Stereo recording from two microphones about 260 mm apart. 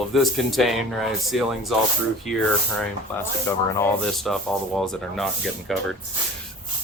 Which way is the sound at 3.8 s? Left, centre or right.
Centre.